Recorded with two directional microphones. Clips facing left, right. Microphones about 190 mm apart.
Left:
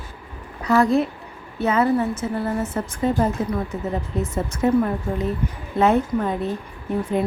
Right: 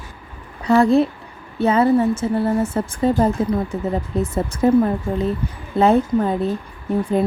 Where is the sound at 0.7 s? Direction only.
30° right (ahead or behind).